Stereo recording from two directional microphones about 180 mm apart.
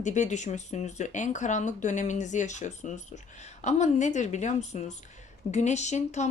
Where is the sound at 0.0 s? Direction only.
40° left (ahead or behind).